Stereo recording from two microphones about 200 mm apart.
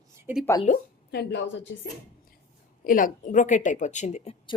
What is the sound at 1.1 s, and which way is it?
Speech, 60° left (ahead or behind).